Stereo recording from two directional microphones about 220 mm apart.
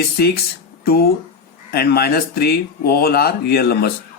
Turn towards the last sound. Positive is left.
turn(degrees=45)  # may be behind; listen again after turning